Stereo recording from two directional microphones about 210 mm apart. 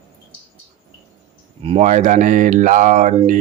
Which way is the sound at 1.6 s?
30° right (ahead or behind).